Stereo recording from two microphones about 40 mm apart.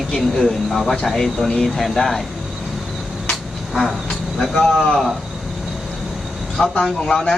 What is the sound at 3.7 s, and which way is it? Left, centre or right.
Vehicle, centre.